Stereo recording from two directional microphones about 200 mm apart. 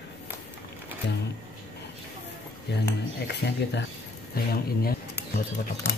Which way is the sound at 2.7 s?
60° left (ahead or behind).